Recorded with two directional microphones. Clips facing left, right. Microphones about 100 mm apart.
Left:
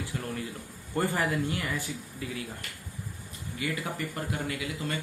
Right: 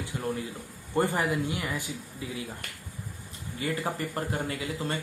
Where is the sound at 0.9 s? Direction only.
20° right (ahead or behind).